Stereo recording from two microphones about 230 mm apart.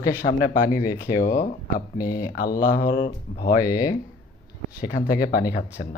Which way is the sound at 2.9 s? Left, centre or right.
Centre.